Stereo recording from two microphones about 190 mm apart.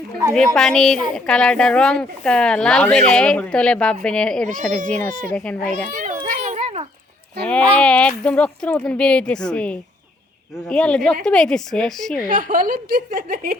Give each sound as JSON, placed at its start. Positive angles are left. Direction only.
{"t": 0.3, "sound": "speech", "side_deg": 5}
{"t": 5.9, "sound": "children playing", "side_deg": -45}
{"t": 6.2, "sound": "a sound", "side_deg": -40}
{"t": 7.4, "sound": "speech", "side_deg": 5}
{"t": 12.3, "sound": "a woman's voice", "side_deg": -45}